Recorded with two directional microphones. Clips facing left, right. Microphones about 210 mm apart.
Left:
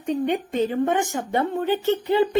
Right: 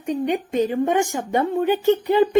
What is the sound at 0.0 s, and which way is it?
Speech, 15° right (ahead or behind).